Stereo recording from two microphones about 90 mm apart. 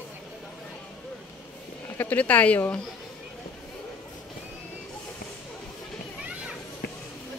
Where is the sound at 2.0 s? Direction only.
20° left (ahead or behind).